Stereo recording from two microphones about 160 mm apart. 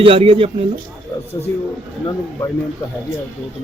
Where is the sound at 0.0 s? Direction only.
35° right (ahead or behind).